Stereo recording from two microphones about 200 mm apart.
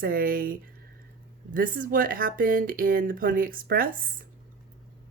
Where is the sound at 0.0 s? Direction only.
45° right (ahead or behind).